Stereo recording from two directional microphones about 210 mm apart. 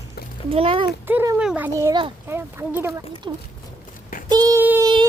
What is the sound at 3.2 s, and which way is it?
Speech, 20° right (ahead or behind).